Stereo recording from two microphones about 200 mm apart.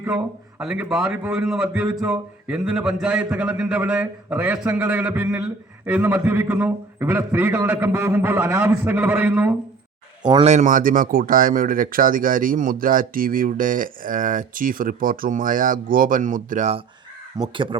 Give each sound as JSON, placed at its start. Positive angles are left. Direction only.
{"t": 0.6, "sound": "a man's voice", "side_deg": -5}
{"t": 10.2, "sound": "speech", "side_deg": -25}
{"t": 10.5, "sound": "speech", "side_deg": -40}
{"t": 17.5, "sound": "speech", "side_deg": -25}